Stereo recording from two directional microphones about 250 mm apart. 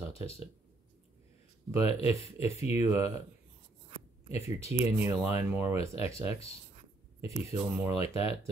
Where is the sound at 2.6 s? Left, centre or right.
Centre.